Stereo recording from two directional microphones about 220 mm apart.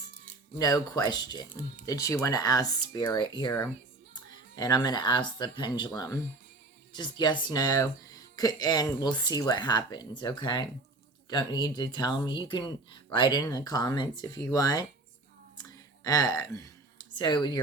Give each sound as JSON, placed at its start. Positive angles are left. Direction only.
{"t": 0.6, "sound": "speech", "side_deg": 15}
{"t": 16.0, "sound": "speech", "side_deg": 15}